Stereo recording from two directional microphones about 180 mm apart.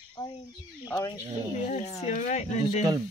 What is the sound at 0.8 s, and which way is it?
Speech, 20° left (ahead or behind).